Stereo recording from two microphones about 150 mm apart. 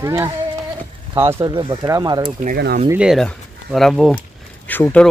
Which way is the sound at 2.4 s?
80° right.